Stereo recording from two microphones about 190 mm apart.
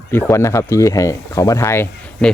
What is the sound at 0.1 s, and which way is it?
Speech, 15° left (ahead or behind).